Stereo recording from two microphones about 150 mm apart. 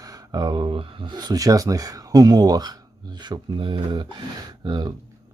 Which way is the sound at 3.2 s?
30° right (ahead or behind).